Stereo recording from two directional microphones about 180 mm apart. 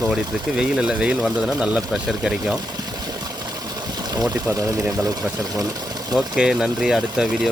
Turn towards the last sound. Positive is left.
turn(degrees=-5)  # may be behind; listen again after turning